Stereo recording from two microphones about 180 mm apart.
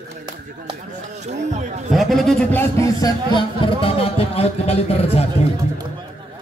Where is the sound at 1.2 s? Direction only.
40° right (ahead or behind).